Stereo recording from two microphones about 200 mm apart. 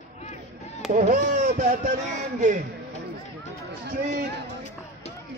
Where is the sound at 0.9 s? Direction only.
35° right (ahead or behind).